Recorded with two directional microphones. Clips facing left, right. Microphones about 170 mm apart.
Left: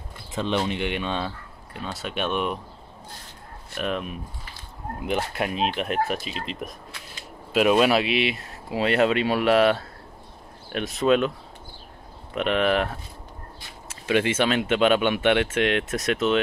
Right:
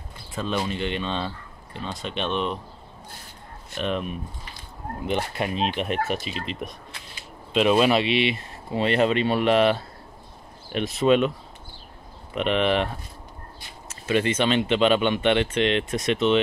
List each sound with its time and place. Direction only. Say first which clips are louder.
0.3 s speech: left 2 dB; 20° left (ahead or behind)
3.7 s speech: right 1 dB; centre (ahead or behind)
7.7 s speech: right 1 dB; centre (ahead or behind)
12.4 s speech: even; centre (ahead or behind)
14.0 s speech: even; 10° left (ahead or behind)